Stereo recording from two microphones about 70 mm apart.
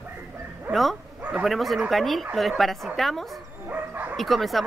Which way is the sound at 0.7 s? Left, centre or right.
Right.